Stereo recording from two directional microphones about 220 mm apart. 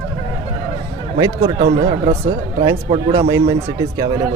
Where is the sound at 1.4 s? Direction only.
25° right (ahead or behind).